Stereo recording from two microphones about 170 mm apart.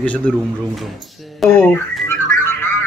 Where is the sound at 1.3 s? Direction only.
5° left (ahead or behind).